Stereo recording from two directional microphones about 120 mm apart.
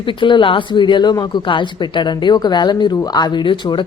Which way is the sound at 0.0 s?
45° left (ahead or behind).